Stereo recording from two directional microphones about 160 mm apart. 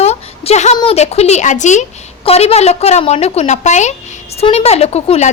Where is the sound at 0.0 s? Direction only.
40° left (ahead or behind).